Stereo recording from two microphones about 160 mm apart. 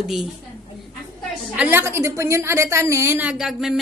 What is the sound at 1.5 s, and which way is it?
A woman's voice, 10° right (ahead or behind).